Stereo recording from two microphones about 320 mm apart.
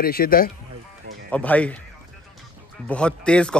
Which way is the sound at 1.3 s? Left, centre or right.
Centre.